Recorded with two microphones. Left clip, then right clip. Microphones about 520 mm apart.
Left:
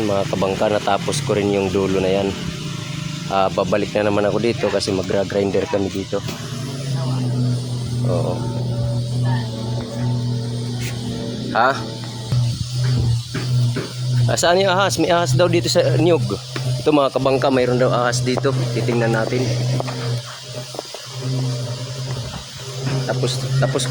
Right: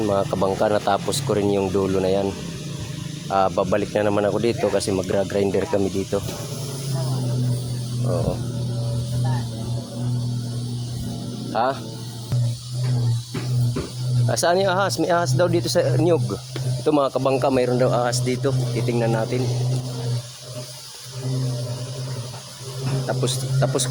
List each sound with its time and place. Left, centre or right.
0.1 s speech: right
3.2 s speech: right
11.5 s speech: right
14.3 s speech: right
23.0 s music: right